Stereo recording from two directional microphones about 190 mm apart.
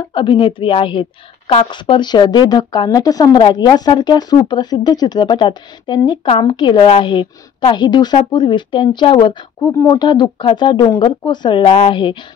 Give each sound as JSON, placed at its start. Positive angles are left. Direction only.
{"t": 0.1, "sound": "speech", "side_deg": 25}